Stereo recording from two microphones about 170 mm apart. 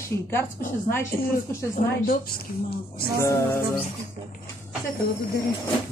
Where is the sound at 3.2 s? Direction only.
20° left (ahead or behind).